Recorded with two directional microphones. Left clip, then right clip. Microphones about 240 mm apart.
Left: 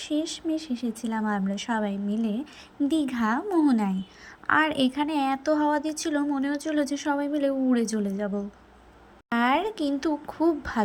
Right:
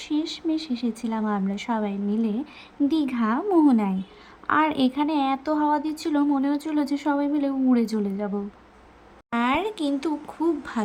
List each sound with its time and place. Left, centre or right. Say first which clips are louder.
0.0 s speech: right 2 dB; centre
9.3 s speech: even; centre